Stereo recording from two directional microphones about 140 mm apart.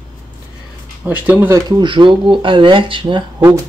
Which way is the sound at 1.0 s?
10° right (ahead or behind).